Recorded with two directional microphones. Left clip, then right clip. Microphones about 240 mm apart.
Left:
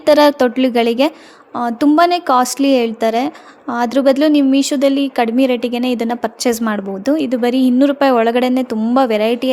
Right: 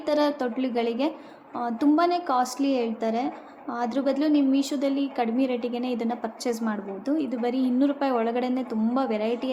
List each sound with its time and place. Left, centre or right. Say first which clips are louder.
0.0 s a woman's voice: left 14 dB; left